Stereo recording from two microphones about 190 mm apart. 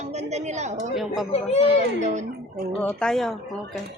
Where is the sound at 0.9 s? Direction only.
Centre (ahead or behind).